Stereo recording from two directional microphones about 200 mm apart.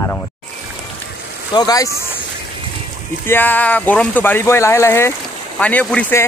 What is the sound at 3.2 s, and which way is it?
Speech, 10° left (ahead or behind).